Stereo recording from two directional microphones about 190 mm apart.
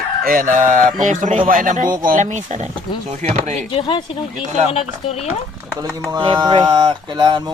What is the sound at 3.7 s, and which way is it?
Speech, 25° left (ahead or behind).